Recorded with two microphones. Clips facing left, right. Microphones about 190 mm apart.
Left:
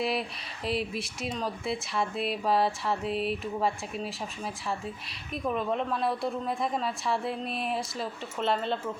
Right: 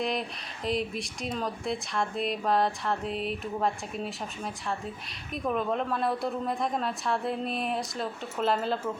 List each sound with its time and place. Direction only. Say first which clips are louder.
0.0 s speech: even; 5° left (ahead or behind)